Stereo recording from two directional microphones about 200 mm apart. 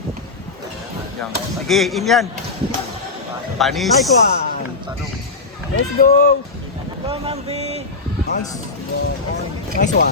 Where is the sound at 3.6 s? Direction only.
Centre (ahead or behind).